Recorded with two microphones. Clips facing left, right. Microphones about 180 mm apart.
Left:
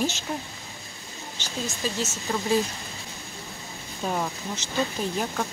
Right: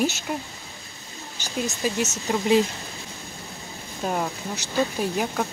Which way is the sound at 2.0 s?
20° right (ahead or behind).